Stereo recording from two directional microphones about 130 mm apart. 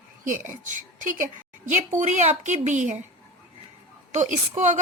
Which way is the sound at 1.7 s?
65° right (ahead or behind).